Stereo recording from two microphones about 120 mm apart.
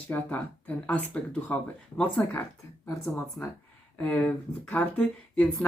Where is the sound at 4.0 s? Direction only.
15° left (ahead or behind).